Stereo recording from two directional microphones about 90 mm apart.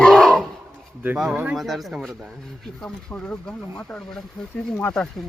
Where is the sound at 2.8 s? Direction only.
10° left (ahead or behind).